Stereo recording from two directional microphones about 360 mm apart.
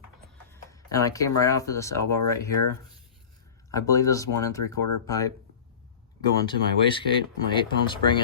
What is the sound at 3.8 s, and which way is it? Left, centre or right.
Speech, centre.